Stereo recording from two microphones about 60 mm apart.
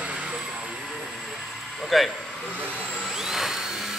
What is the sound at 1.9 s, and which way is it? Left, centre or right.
Speech, centre.